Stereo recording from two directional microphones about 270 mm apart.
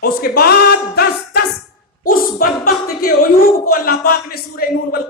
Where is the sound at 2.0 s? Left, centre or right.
Left.